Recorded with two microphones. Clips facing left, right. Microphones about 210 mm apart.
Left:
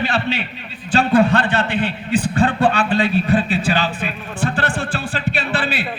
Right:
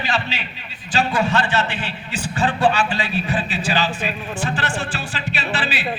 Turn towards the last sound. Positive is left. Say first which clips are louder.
# left 3 dB
turn(degrees=55)  # may be behind; listen again after turning